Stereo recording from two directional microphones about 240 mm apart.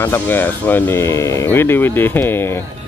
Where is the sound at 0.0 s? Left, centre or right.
Centre.